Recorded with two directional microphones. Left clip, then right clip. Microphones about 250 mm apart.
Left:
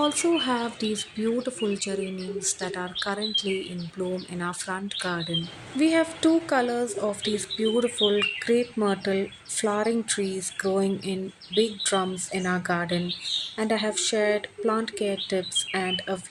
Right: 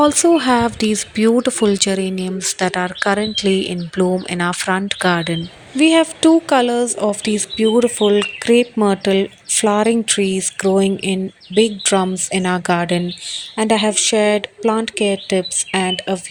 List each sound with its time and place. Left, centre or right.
0.0 s speech: right